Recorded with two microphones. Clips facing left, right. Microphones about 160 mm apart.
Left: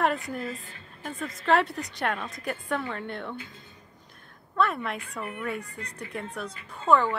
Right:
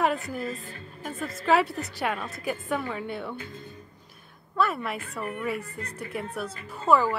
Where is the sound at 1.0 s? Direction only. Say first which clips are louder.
Right 1 dB; 5° right (ahead or behind).